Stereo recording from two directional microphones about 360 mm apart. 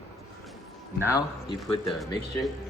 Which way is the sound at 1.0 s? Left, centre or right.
Centre.